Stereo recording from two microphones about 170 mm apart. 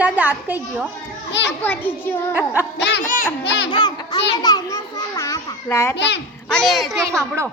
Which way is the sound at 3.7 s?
25° left (ahead or behind).